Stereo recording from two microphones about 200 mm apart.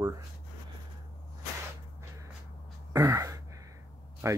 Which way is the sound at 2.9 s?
15° right (ahead or behind).